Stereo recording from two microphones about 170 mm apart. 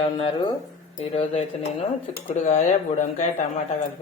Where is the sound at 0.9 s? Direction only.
35° left (ahead or behind).